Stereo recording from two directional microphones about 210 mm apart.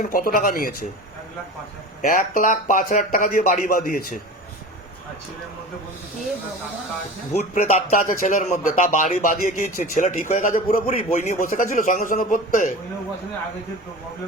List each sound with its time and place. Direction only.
0.0 s speech: 40° left (ahead or behind)
2.0 s speech: 40° left (ahead or behind)
7.3 s speech: 35° left (ahead or behind)